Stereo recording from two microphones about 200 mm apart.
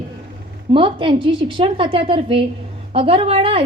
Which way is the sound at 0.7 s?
25° right (ahead or behind).